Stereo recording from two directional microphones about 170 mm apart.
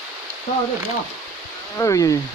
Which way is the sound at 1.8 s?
20° left (ahead or behind).